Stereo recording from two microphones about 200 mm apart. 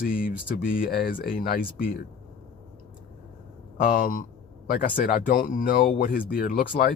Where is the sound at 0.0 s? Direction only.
45° left (ahead or behind).